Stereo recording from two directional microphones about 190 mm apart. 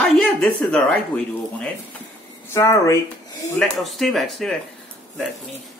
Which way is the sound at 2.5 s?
15° left (ahead or behind).